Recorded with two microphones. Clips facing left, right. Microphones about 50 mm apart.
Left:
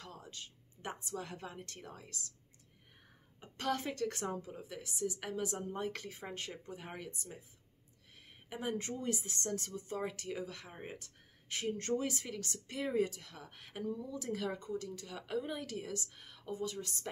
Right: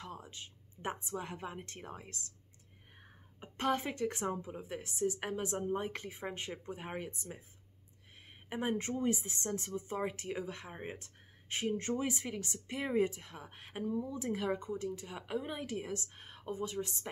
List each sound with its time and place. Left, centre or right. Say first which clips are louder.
0.0 s a woman's voice: right 3 dB; right
8.5 s speech: right 3 dB; right